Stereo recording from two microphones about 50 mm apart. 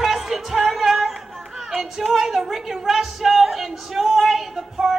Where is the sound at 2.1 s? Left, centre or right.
Centre.